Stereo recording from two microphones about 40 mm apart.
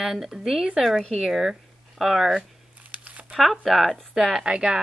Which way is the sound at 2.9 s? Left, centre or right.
Right.